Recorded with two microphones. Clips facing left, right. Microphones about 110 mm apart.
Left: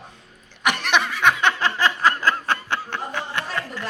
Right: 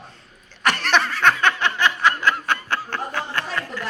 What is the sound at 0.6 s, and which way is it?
Snicker, 15° left (ahead or behind).